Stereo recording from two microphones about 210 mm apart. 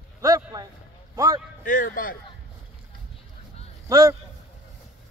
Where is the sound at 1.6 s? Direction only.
40° left (ahead or behind).